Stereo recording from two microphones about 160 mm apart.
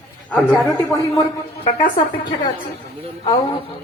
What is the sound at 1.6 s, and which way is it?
Speech, 50° left (ahead or behind).